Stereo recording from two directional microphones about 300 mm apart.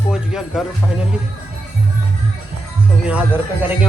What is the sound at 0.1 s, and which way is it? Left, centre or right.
Music, centre.